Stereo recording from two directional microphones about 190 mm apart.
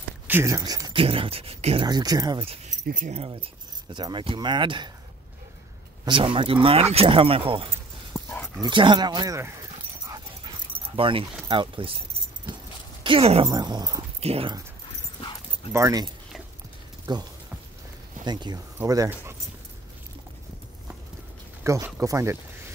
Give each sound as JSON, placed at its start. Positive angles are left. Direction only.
{"t": 0.3, "sound": "speech", "side_deg": -15}
{"t": 2.4, "sound": "speech", "side_deg": -30}
{"t": 6.0, "sound": "speech", "side_deg": -25}
{"t": 8.1, "sound": "dog", "side_deg": 15}
{"t": 8.5, "sound": "speech", "side_deg": -25}
{"t": 10.0, "sound": "dog", "side_deg": -20}
{"t": 11.0, "sound": "speech", "side_deg": -30}
{"t": 13.0, "sound": "speech", "side_deg": -30}
{"t": 14.2, "sound": "speech", "side_deg": -30}
{"t": 15.7, "sound": "speech", "side_deg": -20}
{"t": 21.6, "sound": "speech", "side_deg": -15}